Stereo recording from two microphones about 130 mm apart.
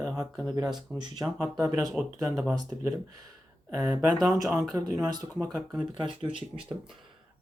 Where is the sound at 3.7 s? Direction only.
30° right (ahead or behind).